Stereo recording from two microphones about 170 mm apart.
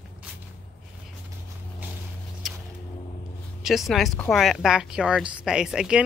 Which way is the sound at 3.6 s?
Centre (ahead or behind).